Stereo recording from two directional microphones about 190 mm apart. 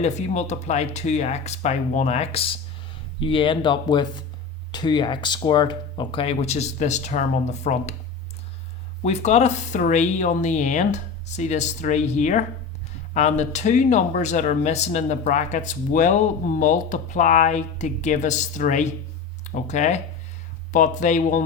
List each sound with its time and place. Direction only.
0.0 s speech: 35° left (ahead or behind)
9.0 s speech: 35° left (ahead or behind)